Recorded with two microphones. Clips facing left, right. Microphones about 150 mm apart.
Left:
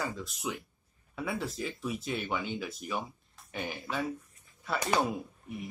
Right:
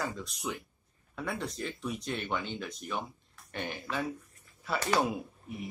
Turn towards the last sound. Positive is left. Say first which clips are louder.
# even
turn(degrees=0)  # may be behind; listen again after turning